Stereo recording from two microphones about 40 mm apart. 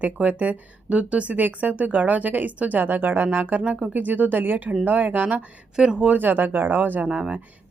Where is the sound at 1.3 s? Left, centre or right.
Right.